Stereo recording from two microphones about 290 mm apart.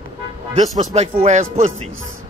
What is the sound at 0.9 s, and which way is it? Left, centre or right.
Speech, right.